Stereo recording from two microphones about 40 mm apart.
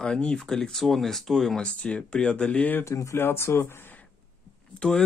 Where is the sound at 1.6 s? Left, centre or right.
Left.